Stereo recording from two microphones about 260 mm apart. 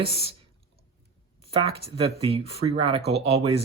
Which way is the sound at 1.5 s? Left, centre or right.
Right.